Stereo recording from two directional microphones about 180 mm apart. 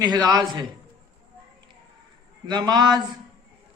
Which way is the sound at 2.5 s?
25° right (ahead or behind).